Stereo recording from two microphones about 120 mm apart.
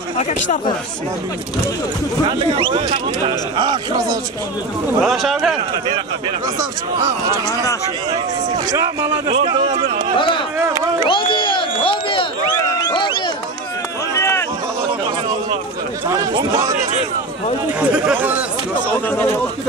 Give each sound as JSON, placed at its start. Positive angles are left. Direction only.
{"t": 0.2, "sound": "speech", "side_deg": 70}
{"t": 2.2, "sound": "speech", "side_deg": -50}
{"t": 3.3, "sound": "speech", "side_deg": -40}
{"t": 5.0, "sound": "speech", "side_deg": 0}
{"t": 8.7, "sound": "speech", "side_deg": -35}
{"t": 9.4, "sound": "speech", "side_deg": -50}
{"t": 10.1, "sound": "speech", "side_deg": 45}
{"t": 10.7, "sound": "speech", "side_deg": -30}
{"t": 11.1, "sound": "crowd", "side_deg": 45}
{"t": 14.1, "sound": "a sound", "side_deg": 20}
{"t": 17.7, "sound": "speech", "side_deg": -10}
{"t": 18.9, "sound": "a man's voice", "side_deg": 15}